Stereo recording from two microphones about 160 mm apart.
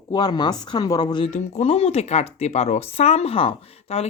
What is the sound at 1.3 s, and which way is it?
Speech, 45° left (ahead or behind).